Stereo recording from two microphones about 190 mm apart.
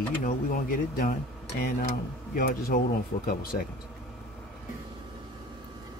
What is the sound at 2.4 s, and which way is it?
Speech, 50° left (ahead or behind).